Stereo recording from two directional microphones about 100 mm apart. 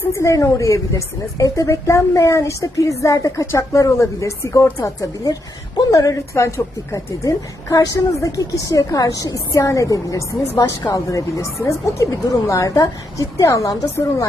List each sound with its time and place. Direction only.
0.0 s a woman's voice: 30° left (ahead or behind)